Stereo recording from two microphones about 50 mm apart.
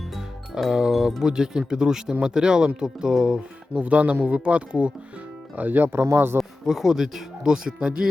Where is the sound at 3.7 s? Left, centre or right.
Right.